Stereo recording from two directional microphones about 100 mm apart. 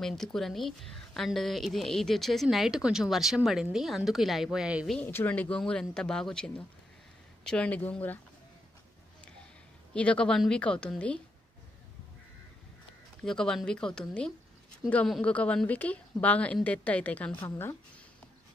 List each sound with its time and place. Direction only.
0.0 s a woman's voice: 5° left (ahead or behind)
5.0 s speech: 20° left (ahead or behind)
9.9 s speech: 10° left (ahead or behind)
13.2 s speech: 5° left (ahead or behind)
14.8 s speech: 40° left (ahead or behind)
15.2 s speech: 15° left (ahead or behind)